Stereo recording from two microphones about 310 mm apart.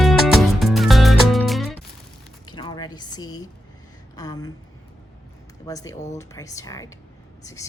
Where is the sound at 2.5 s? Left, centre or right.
Centre.